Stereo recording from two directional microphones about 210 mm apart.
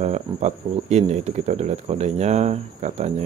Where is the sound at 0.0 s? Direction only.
30° right (ahead or behind).